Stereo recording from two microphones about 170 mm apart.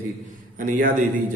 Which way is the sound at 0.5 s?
50° right (ahead or behind).